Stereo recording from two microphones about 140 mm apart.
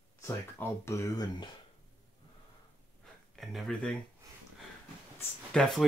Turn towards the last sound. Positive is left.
turn(degrees=5)  # may be behind; listen again after turning